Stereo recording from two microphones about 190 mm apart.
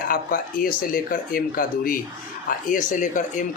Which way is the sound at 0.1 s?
50° left (ahead or behind).